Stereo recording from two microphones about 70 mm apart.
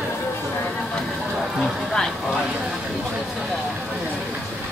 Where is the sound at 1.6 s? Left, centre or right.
Centre.